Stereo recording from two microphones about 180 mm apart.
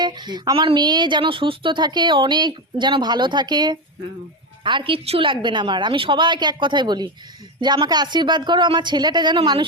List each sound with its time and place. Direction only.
0.0 s a woman's voice: 25° right (ahead or behind)